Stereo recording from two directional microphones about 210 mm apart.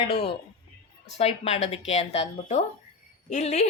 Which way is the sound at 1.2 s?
30° left (ahead or behind).